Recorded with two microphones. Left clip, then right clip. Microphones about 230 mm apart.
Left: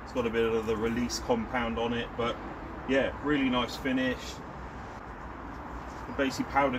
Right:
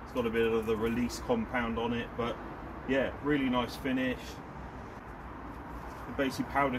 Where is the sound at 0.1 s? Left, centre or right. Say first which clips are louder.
Left 1 dB; right.